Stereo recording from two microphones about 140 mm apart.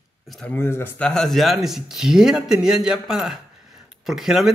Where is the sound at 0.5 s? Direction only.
15° left (ahead or behind).